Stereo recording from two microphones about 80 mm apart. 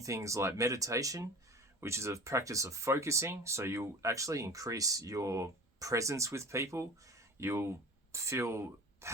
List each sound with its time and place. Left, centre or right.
0.0 s speech: right